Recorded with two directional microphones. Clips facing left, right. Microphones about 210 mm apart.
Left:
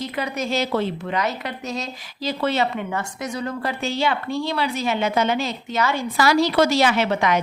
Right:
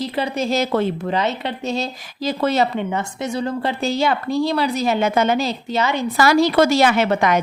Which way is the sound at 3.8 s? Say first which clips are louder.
Right 3 dB; 40° right (ahead or behind).